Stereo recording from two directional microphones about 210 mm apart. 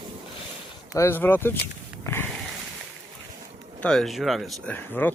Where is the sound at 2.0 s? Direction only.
10° left (ahead or behind).